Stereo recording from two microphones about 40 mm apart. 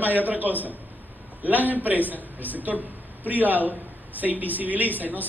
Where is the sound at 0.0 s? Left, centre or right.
Right.